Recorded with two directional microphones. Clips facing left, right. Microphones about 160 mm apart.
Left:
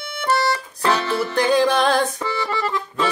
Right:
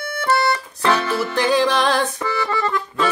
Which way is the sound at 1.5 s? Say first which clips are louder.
Left 1 dB; 50° left (ahead or behind).